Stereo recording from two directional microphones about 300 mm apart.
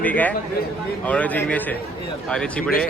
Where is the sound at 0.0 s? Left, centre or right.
Centre.